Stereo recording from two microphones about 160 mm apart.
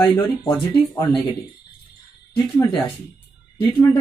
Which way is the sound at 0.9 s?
30° left (ahead or behind).